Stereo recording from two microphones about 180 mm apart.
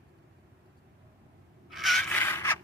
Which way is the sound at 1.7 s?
Centre (ahead or behind).